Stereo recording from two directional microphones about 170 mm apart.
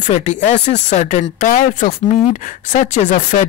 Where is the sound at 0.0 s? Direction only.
45° left (ahead or behind).